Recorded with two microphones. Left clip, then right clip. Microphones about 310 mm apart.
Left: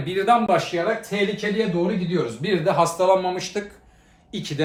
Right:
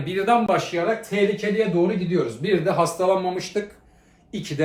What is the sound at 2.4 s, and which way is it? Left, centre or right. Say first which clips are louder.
Speech: left 2 dB; centre.